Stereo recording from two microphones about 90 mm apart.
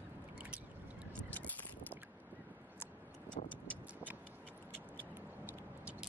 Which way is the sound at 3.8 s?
15° right (ahead or behind).